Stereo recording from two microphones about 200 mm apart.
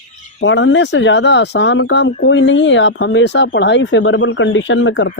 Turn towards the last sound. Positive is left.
turn(degrees=65)  # may be behind; listen again after turning